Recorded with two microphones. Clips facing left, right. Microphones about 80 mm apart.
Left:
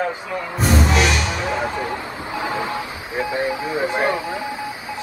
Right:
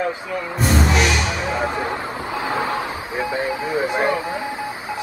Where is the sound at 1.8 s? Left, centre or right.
Right.